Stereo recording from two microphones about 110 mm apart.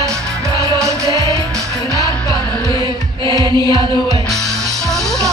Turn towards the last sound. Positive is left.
turn(degrees=-45)  # may be behind; listen again after turning